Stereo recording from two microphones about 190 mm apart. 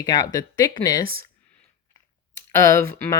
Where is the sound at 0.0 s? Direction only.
20° left (ahead or behind).